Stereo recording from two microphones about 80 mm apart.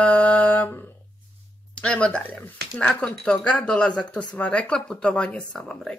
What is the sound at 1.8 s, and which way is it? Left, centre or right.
Speech, centre.